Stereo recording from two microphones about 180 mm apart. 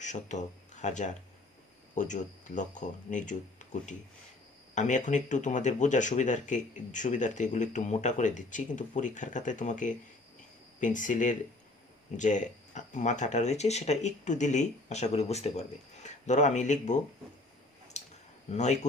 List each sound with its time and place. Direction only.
0.0 s speech: 40° left (ahead or behind)
18.0 s a sound: 40° left (ahead or behind)
18.5 s speech: 40° left (ahead or behind)